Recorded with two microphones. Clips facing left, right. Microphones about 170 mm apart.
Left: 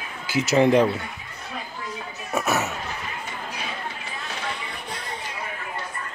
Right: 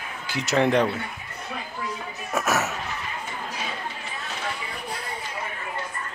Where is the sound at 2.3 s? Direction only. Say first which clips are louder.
Left 1 dB; 5° right (ahead or behind).